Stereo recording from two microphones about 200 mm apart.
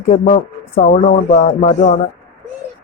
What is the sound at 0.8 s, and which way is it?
Speech, 40° left (ahead or behind).